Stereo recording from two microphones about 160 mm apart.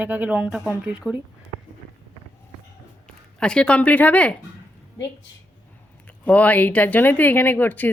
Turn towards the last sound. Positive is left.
turn(degrees=10)  # may be behind; listen again after turning